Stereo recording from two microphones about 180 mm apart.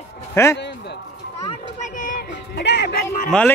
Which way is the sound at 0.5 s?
70° left (ahead or behind).